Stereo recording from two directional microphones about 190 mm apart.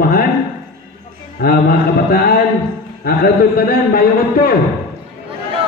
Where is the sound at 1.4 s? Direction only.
50° left (ahead or behind).